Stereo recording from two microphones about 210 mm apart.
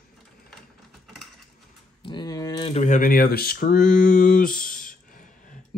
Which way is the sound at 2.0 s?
20° left (ahead or behind).